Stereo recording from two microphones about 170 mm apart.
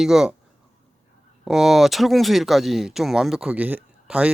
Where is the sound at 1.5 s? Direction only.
Centre (ahead or behind).